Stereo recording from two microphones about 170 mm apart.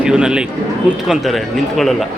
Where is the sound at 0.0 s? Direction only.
5° right (ahead or behind).